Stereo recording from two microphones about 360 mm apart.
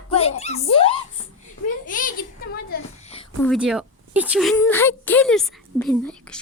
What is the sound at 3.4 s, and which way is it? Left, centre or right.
A woman's voice, centre.